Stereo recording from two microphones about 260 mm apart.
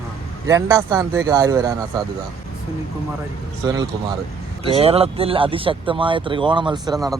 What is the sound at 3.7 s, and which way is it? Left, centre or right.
Speech, centre.